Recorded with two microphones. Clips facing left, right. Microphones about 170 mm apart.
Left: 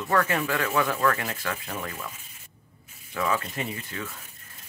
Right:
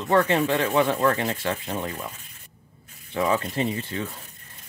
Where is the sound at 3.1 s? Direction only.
30° right (ahead or behind).